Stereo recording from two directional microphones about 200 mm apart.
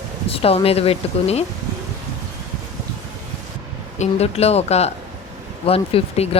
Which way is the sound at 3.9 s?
35° left (ahead or behind).